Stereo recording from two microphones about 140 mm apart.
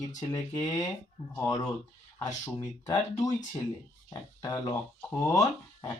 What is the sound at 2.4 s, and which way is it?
Speech, 30° left (ahead or behind).